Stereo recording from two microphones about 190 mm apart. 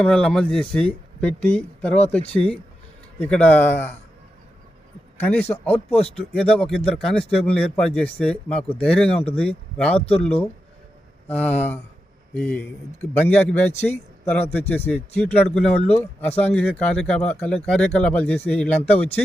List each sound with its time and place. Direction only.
0.0 s speech: 5° left (ahead or behind)
2.2 s speech: 30° left (ahead or behind)
3.2 s speech: 5° left (ahead or behind)
5.2 s speech: 10° left (ahead or behind)
5.7 s speech: 30° left (ahead or behind)
6.1 s speech: 5° left (ahead or behind)
9.1 s speech: 30° left (ahead or behind)
9.4 s speech: 5° left (ahead or behind)
10.1 s speech: 30° left (ahead or behind)
11.3 s speech: 5° left (ahead or behind)